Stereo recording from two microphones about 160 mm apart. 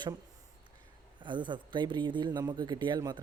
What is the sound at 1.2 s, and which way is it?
Speech, 30° right (ahead or behind).